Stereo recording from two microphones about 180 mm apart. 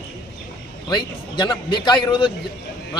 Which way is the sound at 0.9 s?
25° left (ahead or behind).